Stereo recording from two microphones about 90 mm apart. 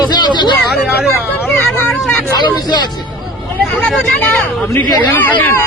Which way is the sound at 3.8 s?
10° left (ahead or behind).